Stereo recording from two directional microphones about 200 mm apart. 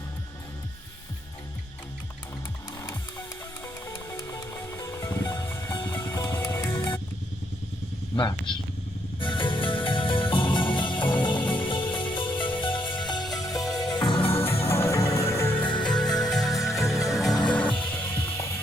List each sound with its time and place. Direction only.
3.8 s music: 10° left (ahead or behind)
8.1 s speech: 20° left (ahead or behind)
9.2 s music: 25° left (ahead or behind)
14.7 s music: 15° left (ahead or behind)
15.6 s music: 25° left (ahead or behind)
16.1 s music: centre (ahead or behind)